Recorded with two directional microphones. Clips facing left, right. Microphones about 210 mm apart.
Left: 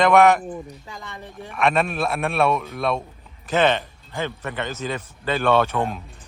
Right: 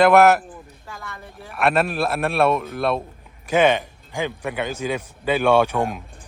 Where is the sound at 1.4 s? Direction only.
5° right (ahead or behind).